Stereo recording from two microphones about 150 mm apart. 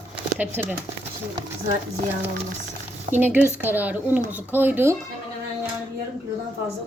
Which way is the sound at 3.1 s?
10° right (ahead or behind).